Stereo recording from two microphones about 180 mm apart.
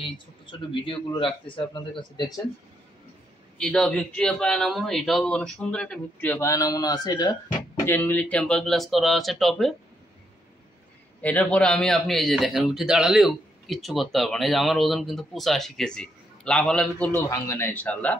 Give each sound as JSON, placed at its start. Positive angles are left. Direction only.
{"t": 0.0, "sound": "a man's voice", "side_deg": 25}
{"t": 3.5, "sound": "a man's voice", "side_deg": 5}
{"t": 7.8, "sound": "a man's voice", "side_deg": 10}
{"t": 11.1, "sound": "a man's voice", "side_deg": 5}